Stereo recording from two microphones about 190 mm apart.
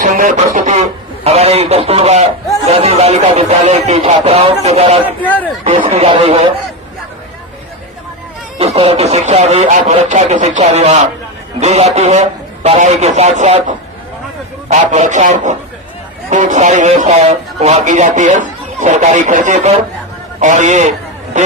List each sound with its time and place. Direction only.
0.0 s a man's voice: 45° right (ahead or behind)
5.2 s speech: 10° left (ahead or behind)
5.6 s a man's voice: 30° right (ahead or behind)
8.5 s a man's voice: 30° right (ahead or behind)